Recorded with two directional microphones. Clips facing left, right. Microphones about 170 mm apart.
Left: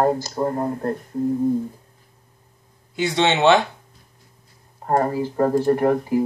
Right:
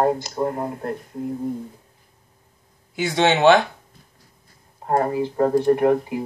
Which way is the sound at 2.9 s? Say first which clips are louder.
Right 1 dB; 5° right (ahead or behind).